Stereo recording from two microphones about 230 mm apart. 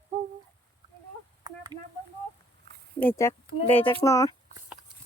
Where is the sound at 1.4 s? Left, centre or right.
Centre.